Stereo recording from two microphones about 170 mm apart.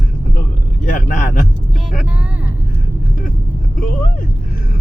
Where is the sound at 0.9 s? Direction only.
50° left (ahead or behind).